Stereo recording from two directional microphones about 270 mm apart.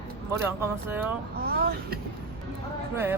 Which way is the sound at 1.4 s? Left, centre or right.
Right.